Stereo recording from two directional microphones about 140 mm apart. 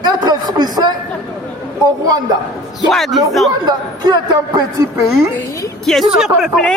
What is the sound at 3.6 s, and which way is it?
Speech, 30° right (ahead or behind).